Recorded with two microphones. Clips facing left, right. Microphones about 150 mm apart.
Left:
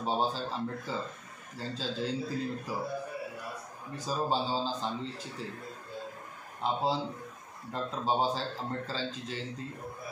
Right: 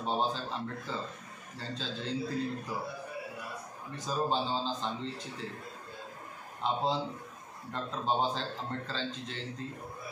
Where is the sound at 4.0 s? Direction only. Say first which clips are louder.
Even; 5° left (ahead or behind).